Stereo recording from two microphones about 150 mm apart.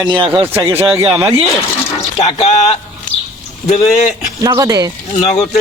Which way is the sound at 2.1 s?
45° left (ahead or behind).